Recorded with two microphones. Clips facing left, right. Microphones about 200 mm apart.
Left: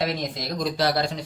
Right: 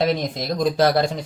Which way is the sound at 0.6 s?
50° right (ahead or behind).